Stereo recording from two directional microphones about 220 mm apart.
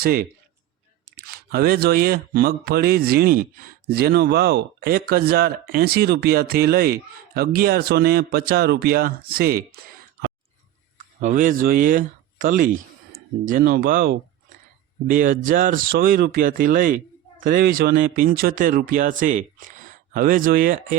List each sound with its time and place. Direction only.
0.0 s speech: 45° right (ahead or behind)
10.9 s speech: 35° right (ahead or behind)